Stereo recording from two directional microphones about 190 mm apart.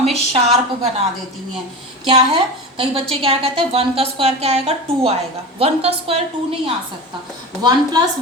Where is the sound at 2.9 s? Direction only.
30° right (ahead or behind).